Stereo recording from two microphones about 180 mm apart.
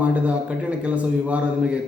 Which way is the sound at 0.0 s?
5° right (ahead or behind).